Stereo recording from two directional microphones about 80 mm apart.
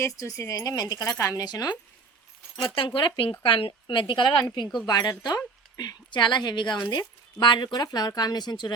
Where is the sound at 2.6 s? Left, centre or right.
Left.